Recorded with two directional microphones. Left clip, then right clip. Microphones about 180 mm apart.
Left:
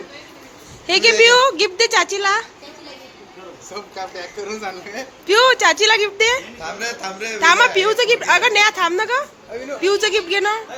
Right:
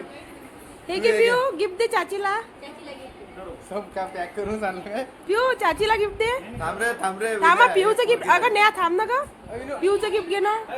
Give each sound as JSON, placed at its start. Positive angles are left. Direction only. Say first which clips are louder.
{"t": 0.9, "sound": "a woman's voice", "louder": "left 7 dB", "side_deg": 20}
{"t": 5.3, "sound": "a woman's voice", "louder": "left 8 dB", "side_deg": 20}
{"t": 6.6, "sound": "music", "louder": "right 1 dB", "side_deg": -25}
{"t": 7.4, "sound": "a woman's voice", "louder": "left 3 dB", "side_deg": 0}